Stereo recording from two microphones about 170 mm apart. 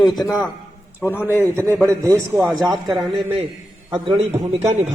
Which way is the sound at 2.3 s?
Centre (ahead or behind).